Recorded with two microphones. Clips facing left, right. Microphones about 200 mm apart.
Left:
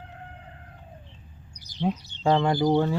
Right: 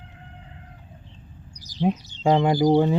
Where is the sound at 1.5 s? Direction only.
60° left (ahead or behind).